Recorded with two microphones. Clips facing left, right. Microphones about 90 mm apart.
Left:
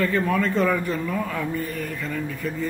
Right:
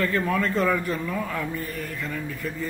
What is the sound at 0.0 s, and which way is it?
Speech, 5° left (ahead or behind).